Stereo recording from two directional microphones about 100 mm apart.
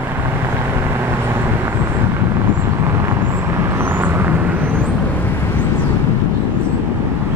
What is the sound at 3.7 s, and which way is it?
Vehicle, 20° right (ahead or behind).